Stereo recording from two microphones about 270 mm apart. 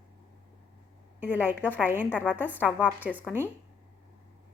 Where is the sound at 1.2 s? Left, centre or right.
Centre.